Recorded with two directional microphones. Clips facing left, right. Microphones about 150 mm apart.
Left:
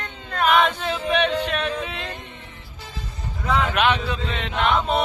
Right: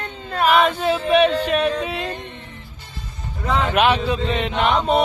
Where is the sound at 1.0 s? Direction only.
10° right (ahead or behind).